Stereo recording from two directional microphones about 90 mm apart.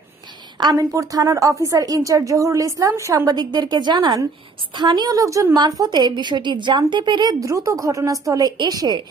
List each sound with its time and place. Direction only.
0.7 s a woman's voice: 40° right (ahead or behind)
5.5 s a woman's voice: 50° right (ahead or behind)
7.3 s a woman's voice: 35° right (ahead or behind)